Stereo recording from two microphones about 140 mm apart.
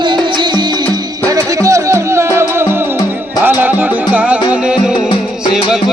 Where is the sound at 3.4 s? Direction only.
15° right (ahead or behind).